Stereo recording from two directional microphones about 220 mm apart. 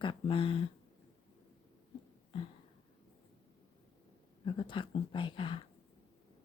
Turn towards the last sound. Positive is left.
turn(degrees=20)  # may be behind; listen again after turning